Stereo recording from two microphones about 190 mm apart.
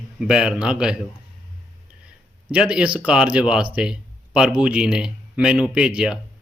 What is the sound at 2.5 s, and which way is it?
Speech, 5° right (ahead or behind).